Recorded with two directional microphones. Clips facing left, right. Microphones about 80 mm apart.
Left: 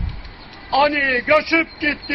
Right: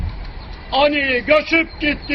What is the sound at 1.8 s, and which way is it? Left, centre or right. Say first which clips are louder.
Speech: right 2 dB; centre.